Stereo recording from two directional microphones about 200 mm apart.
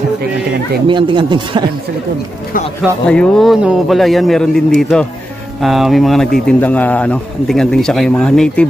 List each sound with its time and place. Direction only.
0.8 s speech: 25° right (ahead or behind)
3.1 s speech: 5° left (ahead or behind)